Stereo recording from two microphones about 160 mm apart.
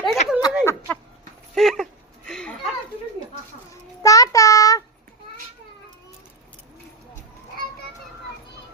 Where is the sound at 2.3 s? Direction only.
5° left (ahead or behind).